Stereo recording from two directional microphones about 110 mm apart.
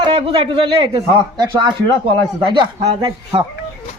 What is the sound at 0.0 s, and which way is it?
Speech, 55° right (ahead or behind).